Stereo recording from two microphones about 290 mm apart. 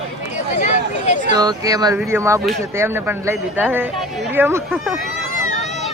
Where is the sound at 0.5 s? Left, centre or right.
Left.